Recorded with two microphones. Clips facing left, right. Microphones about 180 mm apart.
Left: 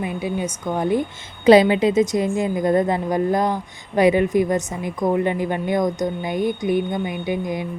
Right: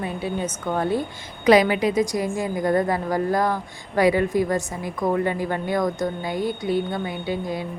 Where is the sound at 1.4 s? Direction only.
25° left (ahead or behind).